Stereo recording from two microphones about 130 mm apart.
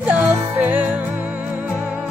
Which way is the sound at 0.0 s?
10° right (ahead or behind).